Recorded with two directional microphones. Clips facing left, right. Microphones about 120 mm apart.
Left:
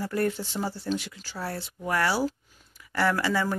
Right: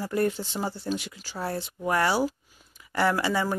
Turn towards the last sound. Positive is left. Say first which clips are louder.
# right 1 dB
turn(degrees=-20)  # may be behind; listen again after turning